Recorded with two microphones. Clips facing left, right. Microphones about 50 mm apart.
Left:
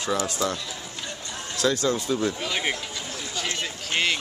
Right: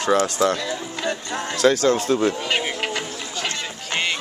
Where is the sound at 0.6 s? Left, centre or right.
Right.